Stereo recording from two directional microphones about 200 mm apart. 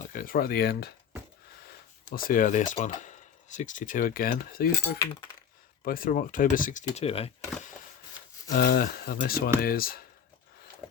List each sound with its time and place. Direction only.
0.1 s speech: 45° left (ahead or behind)
6.9 s speech: 30° left (ahead or behind)
8.4 s speech: 45° left (ahead or behind)